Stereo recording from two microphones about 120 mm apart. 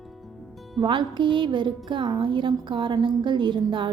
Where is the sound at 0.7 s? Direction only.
40° right (ahead or behind).